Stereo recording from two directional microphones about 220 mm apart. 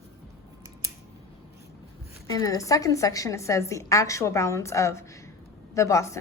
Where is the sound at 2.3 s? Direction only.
15° left (ahead or behind).